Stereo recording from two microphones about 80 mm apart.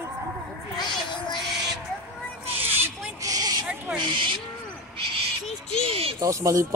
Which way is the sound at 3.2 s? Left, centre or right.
Right.